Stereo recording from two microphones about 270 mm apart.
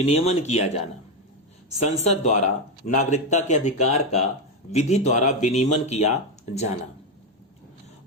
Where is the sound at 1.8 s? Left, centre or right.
Left.